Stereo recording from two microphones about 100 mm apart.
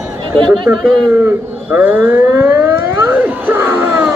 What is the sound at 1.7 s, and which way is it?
Siren, 20° right (ahead or behind).